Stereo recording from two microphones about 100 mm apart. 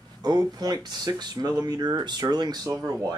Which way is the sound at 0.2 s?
40° right (ahead or behind).